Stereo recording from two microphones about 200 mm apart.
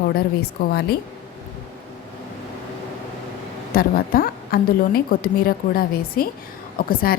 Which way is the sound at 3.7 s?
45° left (ahead or behind).